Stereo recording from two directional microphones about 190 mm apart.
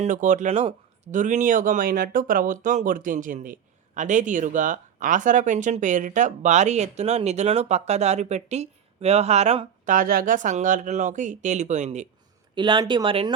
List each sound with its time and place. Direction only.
0.0 s speech: 40° right (ahead or behind)
12.5 s speech: 25° right (ahead or behind)